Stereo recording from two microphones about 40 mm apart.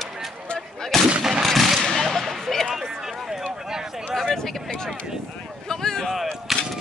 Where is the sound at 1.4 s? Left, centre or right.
Centre.